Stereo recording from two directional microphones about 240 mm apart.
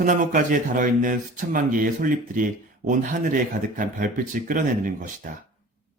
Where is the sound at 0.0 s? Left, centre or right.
Right.